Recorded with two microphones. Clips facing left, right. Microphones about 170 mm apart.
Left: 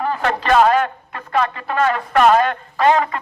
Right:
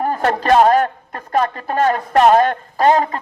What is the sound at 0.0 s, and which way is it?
A man's voice, 45° right (ahead or behind).